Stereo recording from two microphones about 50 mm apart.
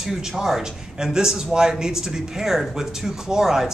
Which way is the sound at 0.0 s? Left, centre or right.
Centre.